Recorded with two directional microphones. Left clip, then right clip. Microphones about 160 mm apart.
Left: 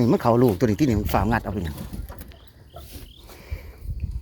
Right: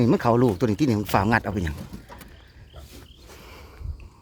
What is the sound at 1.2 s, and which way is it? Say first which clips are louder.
Speech: right 2 dB; 30° right (ahead or behind).